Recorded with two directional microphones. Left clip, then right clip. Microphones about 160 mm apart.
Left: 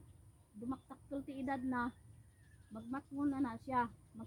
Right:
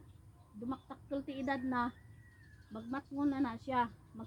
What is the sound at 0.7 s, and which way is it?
A woman's voice, 35° left (ahead or behind).